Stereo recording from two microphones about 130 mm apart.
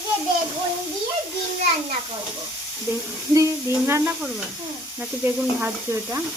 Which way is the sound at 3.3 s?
20° right (ahead or behind).